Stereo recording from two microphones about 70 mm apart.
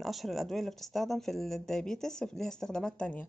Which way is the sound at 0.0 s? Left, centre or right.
Centre.